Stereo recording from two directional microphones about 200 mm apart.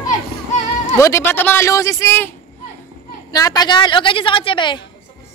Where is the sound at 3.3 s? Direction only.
20° left (ahead or behind).